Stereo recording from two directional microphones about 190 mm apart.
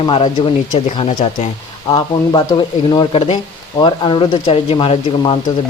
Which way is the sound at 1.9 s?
20° left (ahead or behind).